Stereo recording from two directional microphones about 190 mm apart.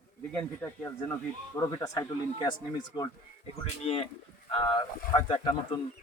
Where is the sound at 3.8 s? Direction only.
30° left (ahead or behind).